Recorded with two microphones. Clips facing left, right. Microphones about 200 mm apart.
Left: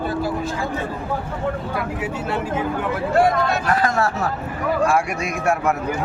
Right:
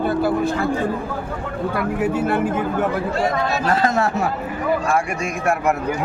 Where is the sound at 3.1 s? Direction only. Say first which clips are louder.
Left 3 dB; 55° left (ahead or behind).